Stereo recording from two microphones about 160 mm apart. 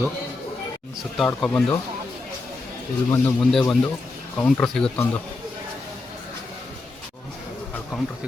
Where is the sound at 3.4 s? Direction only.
5° left (ahead or behind).